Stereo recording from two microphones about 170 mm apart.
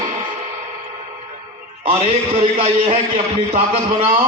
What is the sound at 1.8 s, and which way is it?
A man's voice, 35° right (ahead or behind).